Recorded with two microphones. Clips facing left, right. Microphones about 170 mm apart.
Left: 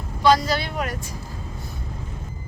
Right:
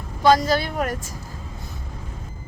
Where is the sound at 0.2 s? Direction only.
45° right (ahead or behind).